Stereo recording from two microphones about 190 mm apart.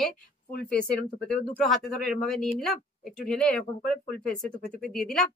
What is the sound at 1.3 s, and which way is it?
Speech, 5° left (ahead or behind).